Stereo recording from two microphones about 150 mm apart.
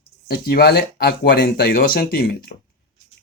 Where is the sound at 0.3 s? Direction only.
90° left.